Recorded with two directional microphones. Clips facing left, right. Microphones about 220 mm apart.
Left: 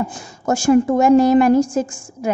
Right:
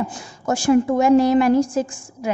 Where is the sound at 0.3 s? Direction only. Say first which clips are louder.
Left 2 dB; 45° left (ahead or behind).